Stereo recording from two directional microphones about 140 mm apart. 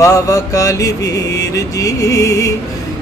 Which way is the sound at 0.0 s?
25° left (ahead or behind).